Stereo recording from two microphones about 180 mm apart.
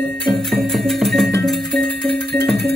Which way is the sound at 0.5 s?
Centre (ahead or behind).